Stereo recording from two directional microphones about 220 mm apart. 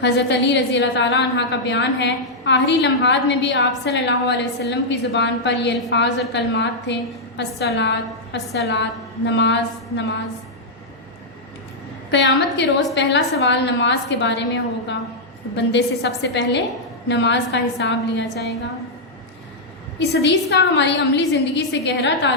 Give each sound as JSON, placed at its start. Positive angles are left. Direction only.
{"t": 0.0, "sound": "a woman's voice", "side_deg": 50}
{"t": 12.5, "sound": "a woman's voice", "side_deg": 55}
{"t": 20.0, "sound": "a woman's voice", "side_deg": 50}